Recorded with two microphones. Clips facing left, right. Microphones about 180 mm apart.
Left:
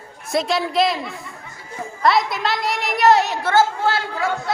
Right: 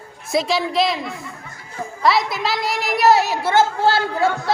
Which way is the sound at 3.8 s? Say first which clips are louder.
Right 4 dB; 30° right (ahead or behind).